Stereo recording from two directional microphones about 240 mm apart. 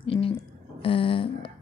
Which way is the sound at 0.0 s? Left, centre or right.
Left.